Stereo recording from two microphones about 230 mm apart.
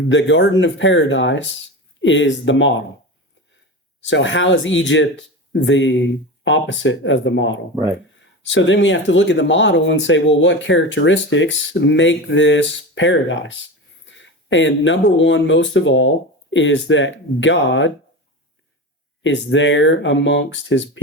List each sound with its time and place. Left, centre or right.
0.1 s speech: left
4.0 s speech: left
19.2 s speech: left